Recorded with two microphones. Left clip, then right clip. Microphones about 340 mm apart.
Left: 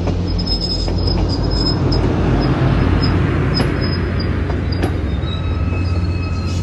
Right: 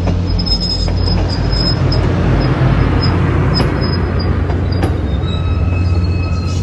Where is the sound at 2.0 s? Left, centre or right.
Right.